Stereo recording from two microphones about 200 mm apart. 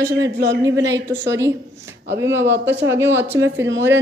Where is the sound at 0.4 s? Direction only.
60° right (ahead or behind).